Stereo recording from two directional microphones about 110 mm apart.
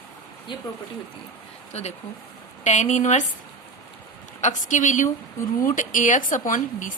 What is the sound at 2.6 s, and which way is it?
Speech, 90° left.